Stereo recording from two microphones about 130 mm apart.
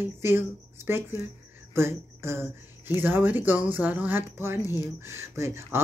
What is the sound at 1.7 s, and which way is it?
Speech, 20° right (ahead or behind).